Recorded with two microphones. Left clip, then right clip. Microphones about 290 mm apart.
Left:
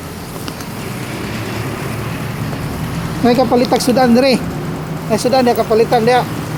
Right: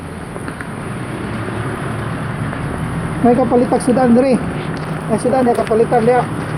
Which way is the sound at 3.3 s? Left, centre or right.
Left.